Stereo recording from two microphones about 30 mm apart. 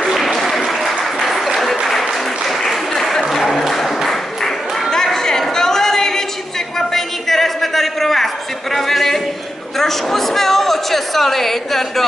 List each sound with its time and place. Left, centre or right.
0.0 s applause: centre
3.0 s applause: centre
3.4 s applause: centre
4.9 s chatter: centre
5.6 s a sound: centre